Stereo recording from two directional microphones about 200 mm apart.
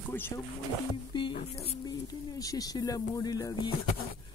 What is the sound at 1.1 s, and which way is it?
Speech, 20° left (ahead or behind).